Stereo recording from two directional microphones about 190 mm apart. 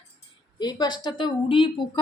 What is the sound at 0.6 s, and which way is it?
Speech, 20° left (ahead or behind).